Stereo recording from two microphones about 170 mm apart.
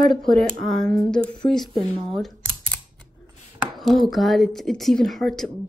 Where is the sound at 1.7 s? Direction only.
30° right (ahead or behind).